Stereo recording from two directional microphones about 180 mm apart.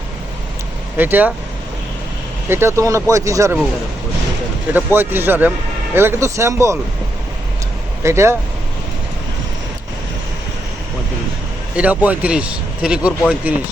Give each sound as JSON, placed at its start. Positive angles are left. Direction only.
{"t": 0.9, "sound": "speech", "side_deg": -10}
{"t": 2.5, "sound": "speech", "side_deg": -15}
{"t": 4.7, "sound": "speech", "side_deg": -10}
{"t": 8.0, "sound": "speech", "side_deg": -15}
{"t": 11.8, "sound": "speech", "side_deg": -10}